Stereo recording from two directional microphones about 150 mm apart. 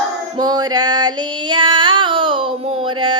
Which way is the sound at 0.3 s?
25° right (ahead or behind).